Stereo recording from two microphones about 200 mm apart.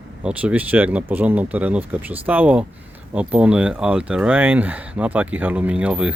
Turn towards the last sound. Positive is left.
turn(degrees=-5)  # may be behind; listen again after turning